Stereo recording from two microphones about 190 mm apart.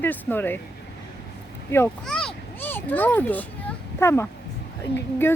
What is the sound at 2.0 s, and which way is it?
Children playing, 5° left (ahead or behind).